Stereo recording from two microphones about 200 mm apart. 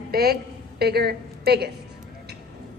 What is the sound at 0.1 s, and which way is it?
A woman's voice, 50° right (ahead or behind).